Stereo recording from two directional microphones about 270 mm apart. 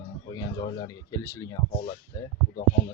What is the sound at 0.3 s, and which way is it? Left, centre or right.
Speech, centre.